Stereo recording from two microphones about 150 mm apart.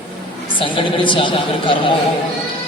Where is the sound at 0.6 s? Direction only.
35° left (ahead or behind).